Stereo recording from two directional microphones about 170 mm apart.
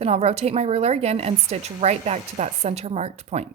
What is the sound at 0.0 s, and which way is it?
A woman's voice, 35° right (ahead or behind).